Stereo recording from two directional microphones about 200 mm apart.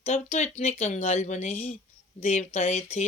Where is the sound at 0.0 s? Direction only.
30° left (ahead or behind).